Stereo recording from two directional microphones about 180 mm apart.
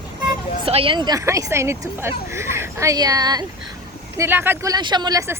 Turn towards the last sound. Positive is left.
turn(degrees=-15)  # may be behind; listen again after turning